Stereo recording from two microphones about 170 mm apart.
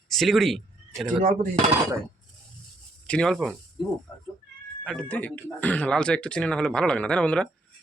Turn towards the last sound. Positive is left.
turn(degrees=5)  # may be behind; listen again after turning